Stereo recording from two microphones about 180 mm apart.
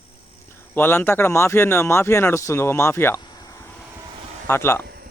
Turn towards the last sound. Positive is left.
turn(degrees=-55)  # may be behind; listen again after turning